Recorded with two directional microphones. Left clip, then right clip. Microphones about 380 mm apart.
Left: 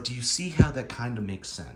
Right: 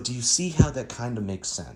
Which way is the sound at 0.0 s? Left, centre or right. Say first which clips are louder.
Right 4 dB; centre.